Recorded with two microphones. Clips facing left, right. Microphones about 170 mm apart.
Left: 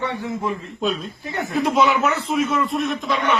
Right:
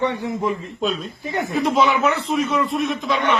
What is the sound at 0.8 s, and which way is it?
Speech, centre (ahead or behind).